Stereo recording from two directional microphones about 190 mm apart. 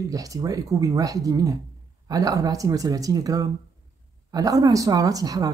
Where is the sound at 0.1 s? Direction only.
20° right (ahead or behind).